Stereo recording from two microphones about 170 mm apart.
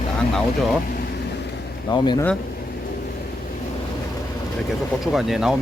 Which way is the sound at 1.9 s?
25° left (ahead or behind).